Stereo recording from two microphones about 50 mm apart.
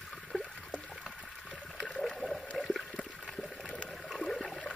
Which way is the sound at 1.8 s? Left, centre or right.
Centre.